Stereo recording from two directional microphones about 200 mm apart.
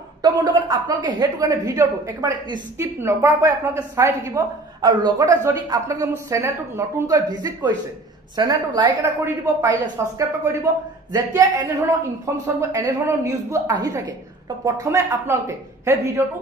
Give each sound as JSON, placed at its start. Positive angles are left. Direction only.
{"t": 0.2, "sound": "a woman's voice", "side_deg": -20}
{"t": 12.7, "sound": "a woman's voice", "side_deg": -15}